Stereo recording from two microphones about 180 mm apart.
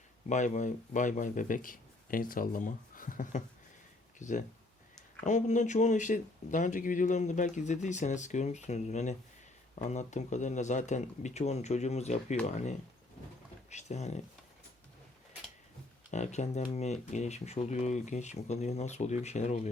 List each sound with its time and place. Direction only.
0.3 s speech: 40° left (ahead or behind)
16.1 s speech: 40° left (ahead or behind)